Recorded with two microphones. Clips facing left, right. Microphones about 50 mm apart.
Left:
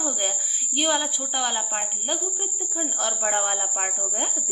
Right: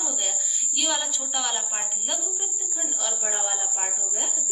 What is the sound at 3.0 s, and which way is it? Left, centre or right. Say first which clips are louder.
Speech: left 6 dB; left.